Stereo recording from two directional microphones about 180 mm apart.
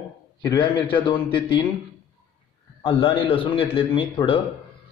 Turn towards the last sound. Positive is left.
turn(degrees=30)  # may be behind; listen again after turning